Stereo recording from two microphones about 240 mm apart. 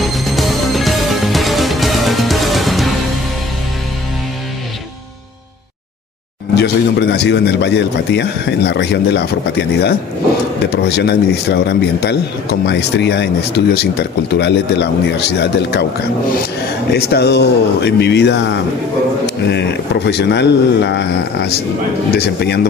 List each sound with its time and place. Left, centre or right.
0.0 s music: centre
6.5 s a man's voice: left
16.9 s a man's voice: left